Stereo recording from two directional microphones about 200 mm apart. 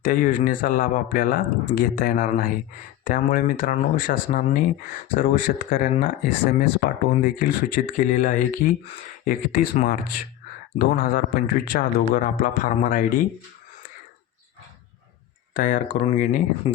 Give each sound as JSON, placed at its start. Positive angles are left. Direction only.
{"t": 0.0, "sound": "speech", "side_deg": 40}
{"t": 15.5, "sound": "speech", "side_deg": 40}
{"t": 16.7, "sound": "speech", "side_deg": 30}